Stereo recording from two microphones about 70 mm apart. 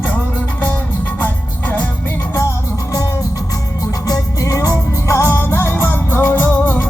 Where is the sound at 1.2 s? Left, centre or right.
Left.